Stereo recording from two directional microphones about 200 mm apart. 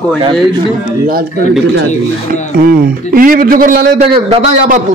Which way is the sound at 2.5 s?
45° right (ahead or behind).